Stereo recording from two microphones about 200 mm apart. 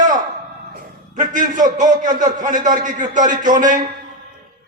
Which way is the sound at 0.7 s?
40° right (ahead or behind).